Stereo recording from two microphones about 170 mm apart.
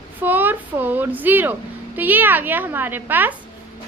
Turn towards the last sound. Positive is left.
turn(degrees=-10)  # may be behind; listen again after turning